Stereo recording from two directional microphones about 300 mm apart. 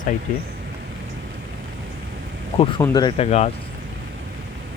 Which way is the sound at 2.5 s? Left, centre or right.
Centre.